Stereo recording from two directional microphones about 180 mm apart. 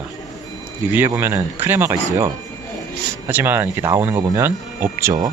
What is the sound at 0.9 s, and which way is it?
Speech, 10° right (ahead or behind).